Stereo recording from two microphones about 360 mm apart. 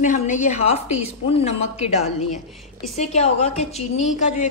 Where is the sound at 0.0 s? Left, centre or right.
Centre.